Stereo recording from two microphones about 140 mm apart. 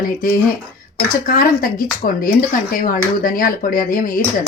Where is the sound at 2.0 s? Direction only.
75° left (ahead or behind).